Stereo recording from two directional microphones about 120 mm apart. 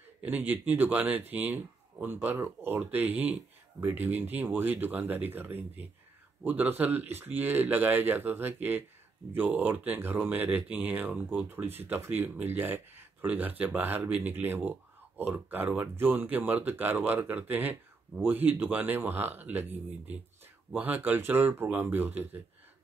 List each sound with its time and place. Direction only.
0.5 s speech: 15° right (ahead or behind)